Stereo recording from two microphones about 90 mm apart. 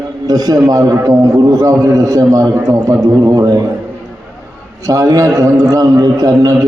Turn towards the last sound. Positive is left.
turn(degrees=-40)  # may be behind; listen again after turning